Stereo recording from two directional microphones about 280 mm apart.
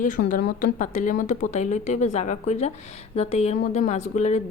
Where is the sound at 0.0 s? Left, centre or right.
Left.